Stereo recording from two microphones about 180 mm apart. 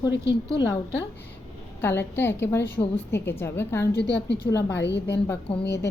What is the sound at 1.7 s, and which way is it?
A woman's voice, 10° left (ahead or behind).